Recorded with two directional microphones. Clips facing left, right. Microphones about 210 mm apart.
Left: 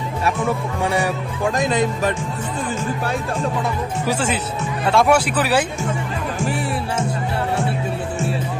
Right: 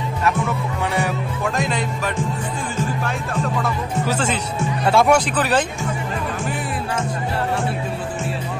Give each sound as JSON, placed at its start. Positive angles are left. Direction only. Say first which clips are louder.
{"t": 1.6, "sound": "speech", "louder": "left 4 dB", "side_deg": 20}
{"t": 3.6, "sound": "speech", "louder": "even", "side_deg": 10}